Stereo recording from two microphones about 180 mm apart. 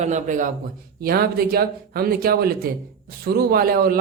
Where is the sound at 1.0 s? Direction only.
60° right (ahead or behind).